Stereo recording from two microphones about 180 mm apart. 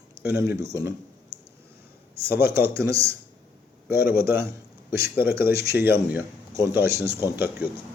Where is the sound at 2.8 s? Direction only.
15° right (ahead or behind).